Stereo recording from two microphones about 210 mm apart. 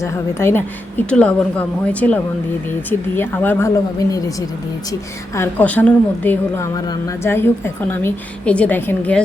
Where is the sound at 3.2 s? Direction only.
10° left (ahead or behind).